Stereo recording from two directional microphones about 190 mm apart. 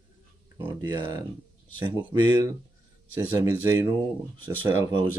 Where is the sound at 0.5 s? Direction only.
15° right (ahead or behind).